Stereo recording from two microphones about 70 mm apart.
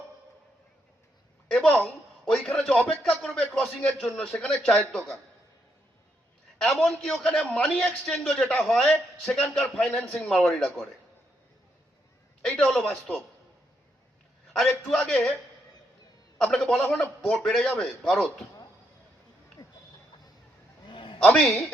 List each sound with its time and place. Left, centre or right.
1.5 s a man's voice: centre
4.3 s speech: centre
6.6 s a man's voice: centre
8.0 s a man's voice: centre
12.5 s a man's voice: centre
14.6 s speech: centre
16.4 s speech: centre
17.4 s a man's voice: centre
19.6 s a sound: left
21.2 s speech: centre